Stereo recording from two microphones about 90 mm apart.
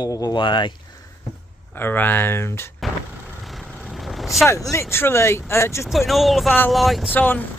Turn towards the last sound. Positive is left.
turn(degrees=20)  # may be behind; listen again after turning